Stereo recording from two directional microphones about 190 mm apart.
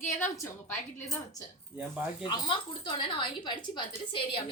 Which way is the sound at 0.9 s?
20° left (ahead or behind).